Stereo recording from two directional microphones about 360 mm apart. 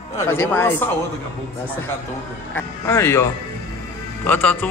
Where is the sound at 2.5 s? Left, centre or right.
Centre.